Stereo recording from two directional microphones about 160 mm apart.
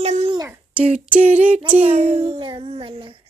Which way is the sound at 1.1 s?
40° right (ahead or behind).